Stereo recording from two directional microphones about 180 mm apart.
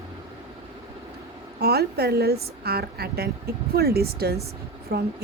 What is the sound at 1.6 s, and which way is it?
A woman's voice, 60° right (ahead or behind).